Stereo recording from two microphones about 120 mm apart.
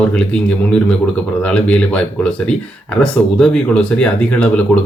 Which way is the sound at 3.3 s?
5° left (ahead or behind).